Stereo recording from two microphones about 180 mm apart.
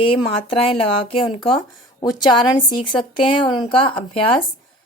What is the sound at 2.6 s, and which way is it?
Speech, 25° left (ahead or behind).